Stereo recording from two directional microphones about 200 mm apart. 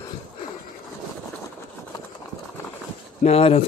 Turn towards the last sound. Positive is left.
turn(degrees=30)  # may be behind; listen again after turning